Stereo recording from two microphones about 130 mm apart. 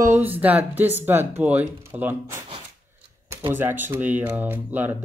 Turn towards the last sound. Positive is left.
turn(degrees=-15)  # may be behind; listen again after turning